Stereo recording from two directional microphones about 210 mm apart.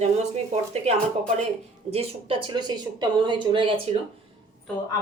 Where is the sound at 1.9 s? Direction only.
25° right (ahead or behind).